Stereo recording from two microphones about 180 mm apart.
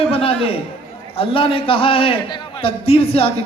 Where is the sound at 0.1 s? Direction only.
30° left (ahead or behind).